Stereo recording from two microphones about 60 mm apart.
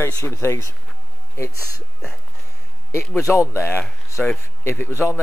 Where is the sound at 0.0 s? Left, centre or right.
Left.